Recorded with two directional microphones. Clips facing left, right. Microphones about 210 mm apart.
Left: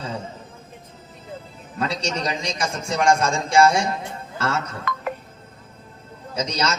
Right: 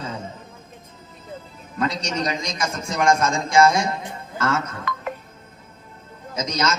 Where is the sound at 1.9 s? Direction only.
30° left (ahead or behind).